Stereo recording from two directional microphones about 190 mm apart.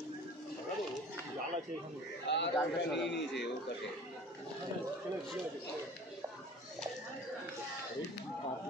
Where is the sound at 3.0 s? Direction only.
65° left (ahead or behind).